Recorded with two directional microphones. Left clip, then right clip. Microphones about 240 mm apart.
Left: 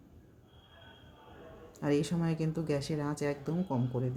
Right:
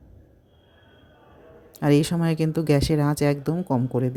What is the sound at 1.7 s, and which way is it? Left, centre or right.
Speech, right.